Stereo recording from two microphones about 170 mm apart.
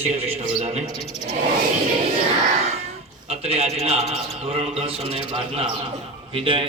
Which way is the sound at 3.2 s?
35° right (ahead or behind).